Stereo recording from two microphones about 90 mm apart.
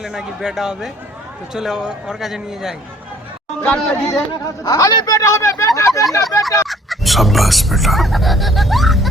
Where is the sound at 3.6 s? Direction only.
20° left (ahead or behind).